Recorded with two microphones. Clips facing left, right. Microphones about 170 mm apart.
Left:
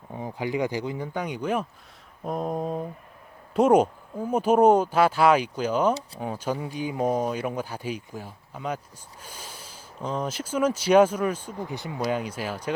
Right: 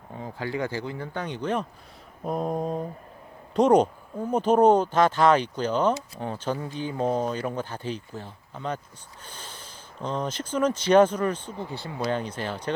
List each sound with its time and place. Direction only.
0.2 s speech: 15° left (ahead or behind)
2.2 s mantra: centre (ahead or behind)
3.5 s speech: 10° left (ahead or behind)